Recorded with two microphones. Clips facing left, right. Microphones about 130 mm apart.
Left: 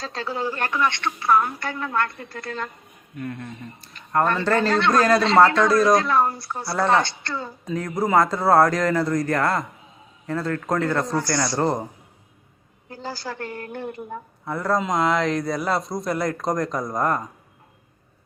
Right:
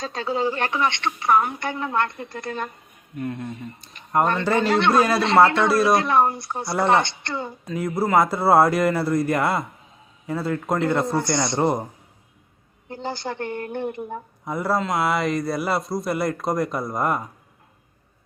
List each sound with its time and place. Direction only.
0.0 s speech: 20° right (ahead or behind)
7.6 s a man's voice: 10° right (ahead or behind)
12.9 s speech: 20° right (ahead or behind); by 17.2 s 5° right (ahead or behind)